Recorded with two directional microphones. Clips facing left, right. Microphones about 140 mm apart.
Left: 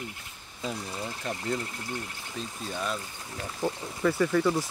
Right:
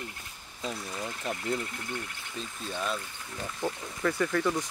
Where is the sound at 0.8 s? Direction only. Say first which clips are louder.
Left 1 dB; 25° left (ahead or behind).